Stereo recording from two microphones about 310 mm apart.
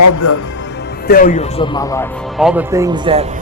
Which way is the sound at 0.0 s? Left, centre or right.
Left.